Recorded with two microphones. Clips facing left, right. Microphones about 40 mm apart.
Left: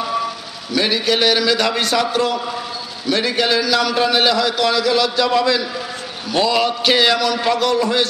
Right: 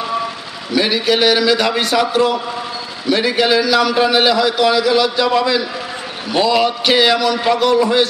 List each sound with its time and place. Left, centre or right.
0.0 s vehicle: centre
0.7 s a man's voice: centre